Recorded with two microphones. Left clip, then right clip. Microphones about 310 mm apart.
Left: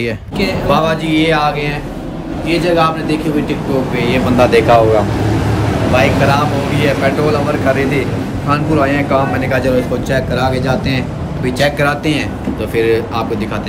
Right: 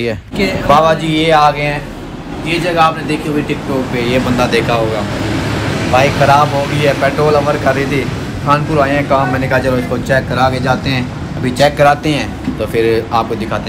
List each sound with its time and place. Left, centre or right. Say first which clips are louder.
0.7 s speech: right 5 dB; centre
4.4 s speech: left 8 dB; left
5.9 s speech: right 4 dB; centre
9.5 s speech: even; centre
11.5 s speech: right 5 dB; centre